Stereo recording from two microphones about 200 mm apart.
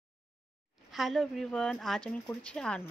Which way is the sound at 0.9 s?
Centre (ahead or behind).